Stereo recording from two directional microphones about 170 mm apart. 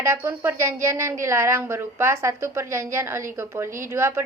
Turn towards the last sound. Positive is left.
turn(degrees=-15)  # may be behind; listen again after turning